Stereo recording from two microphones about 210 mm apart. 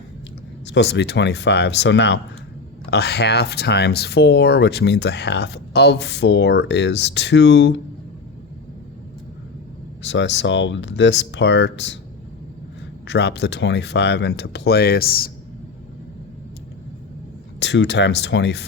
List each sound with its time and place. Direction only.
0.7 s speech: 55° left (ahead or behind)
10.0 s speech: 60° left (ahead or behind)
13.1 s speech: 55° left (ahead or behind)
17.6 s speech: 60° left (ahead or behind)